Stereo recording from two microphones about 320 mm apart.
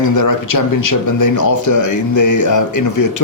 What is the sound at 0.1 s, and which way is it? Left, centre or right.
Speech, left.